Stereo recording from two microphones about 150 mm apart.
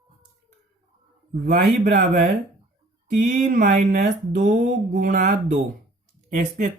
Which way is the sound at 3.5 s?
60° right (ahead or behind).